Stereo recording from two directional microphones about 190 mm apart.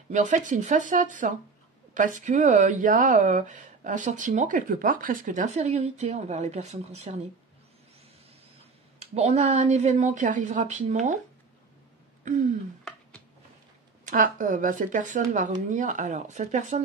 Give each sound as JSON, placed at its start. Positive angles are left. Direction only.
{"t": 0.1, "sound": "speech", "side_deg": -40}
{"t": 9.0, "sound": "speech", "side_deg": -35}
{"t": 12.3, "sound": "speech", "side_deg": -40}
{"t": 14.0, "sound": "speech", "side_deg": -45}